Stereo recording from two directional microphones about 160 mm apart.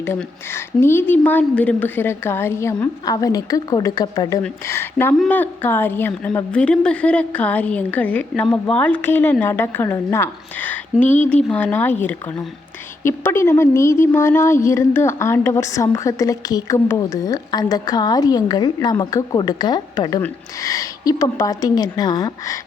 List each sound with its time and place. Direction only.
0.0 s a woman's voice: 15° left (ahead or behind)
13.0 s a woman's voice: 15° left (ahead or behind)